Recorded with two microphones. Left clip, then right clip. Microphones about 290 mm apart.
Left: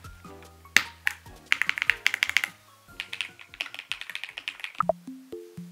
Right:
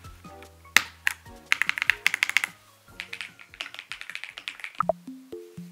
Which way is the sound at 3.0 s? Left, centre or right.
Centre.